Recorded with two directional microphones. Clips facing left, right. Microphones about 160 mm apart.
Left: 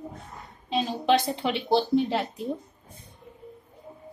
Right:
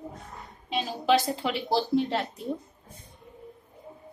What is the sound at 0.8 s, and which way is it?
A woman's voice, 5° right (ahead or behind).